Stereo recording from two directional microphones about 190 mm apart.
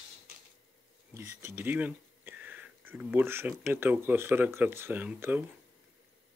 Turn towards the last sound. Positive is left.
turn(degrees=-10)  # may be behind; listen again after turning